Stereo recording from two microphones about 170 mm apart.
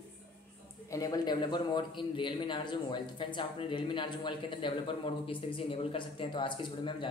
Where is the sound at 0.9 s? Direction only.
20° left (ahead or behind).